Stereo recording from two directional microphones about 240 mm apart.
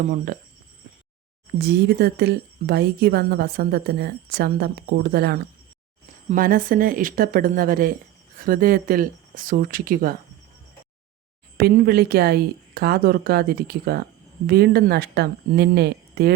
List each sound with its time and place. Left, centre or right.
1.5 s speech: right
11.5 s speech: right